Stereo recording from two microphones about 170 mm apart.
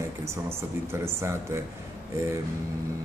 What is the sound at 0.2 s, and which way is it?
Speech, 15° right (ahead or behind).